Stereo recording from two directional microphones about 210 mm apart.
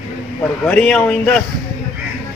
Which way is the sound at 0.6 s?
5° left (ahead or behind).